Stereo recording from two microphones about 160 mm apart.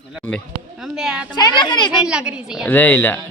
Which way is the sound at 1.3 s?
30° left (ahead or behind).